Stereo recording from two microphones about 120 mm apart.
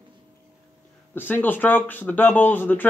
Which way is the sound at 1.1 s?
15° left (ahead or behind).